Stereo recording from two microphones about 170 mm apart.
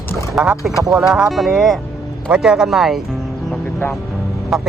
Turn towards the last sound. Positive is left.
turn(degrees=-5)  # may be behind; listen again after turning